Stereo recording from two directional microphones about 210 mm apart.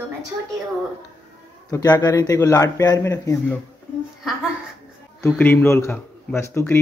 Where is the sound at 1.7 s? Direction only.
15° left (ahead or behind).